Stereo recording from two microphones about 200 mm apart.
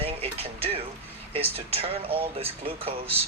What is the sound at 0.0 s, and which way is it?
Music, 30° right (ahead or behind).